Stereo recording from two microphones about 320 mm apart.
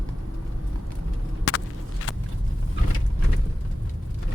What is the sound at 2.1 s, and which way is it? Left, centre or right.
Vehicle, left.